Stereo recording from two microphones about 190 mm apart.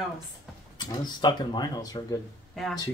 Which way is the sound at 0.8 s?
20° left (ahead or behind).